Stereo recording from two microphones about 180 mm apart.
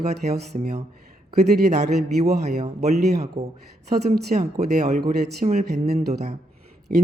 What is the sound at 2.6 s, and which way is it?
Speech, 40° right (ahead or behind).